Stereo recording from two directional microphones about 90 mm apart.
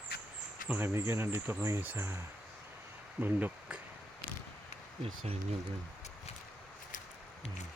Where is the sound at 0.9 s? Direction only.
25° right (ahead or behind).